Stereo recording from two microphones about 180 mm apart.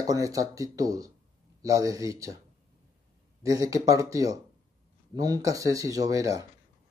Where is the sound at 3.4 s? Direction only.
20° right (ahead or behind).